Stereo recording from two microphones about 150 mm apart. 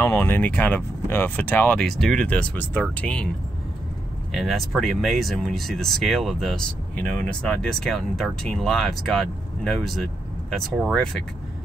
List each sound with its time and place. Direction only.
0.0 s speech: 15° left (ahead or behind)
4.3 s speech: centre (ahead or behind)